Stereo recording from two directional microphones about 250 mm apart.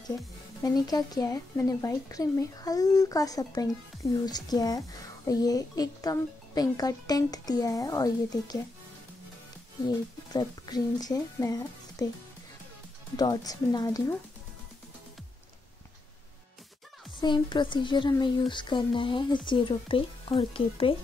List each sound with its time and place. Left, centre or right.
0.7 s speech: centre
9.8 s speech: centre
13.1 s speech: centre
17.2 s speech: centre